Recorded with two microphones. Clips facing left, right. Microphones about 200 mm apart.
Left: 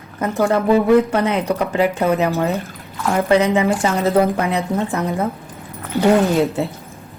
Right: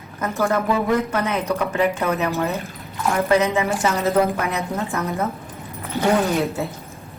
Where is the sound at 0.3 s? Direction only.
30° left (ahead or behind).